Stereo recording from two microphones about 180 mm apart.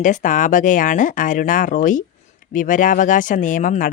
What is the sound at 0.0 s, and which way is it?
Speech, 45° left (ahead or behind).